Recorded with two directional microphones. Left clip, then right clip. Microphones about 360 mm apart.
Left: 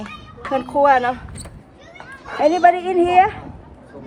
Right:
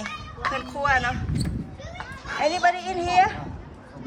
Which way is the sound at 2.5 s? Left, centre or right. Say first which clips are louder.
Left 11 dB; centre.